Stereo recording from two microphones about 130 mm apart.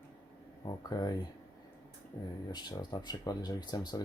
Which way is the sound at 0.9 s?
30° left (ahead or behind).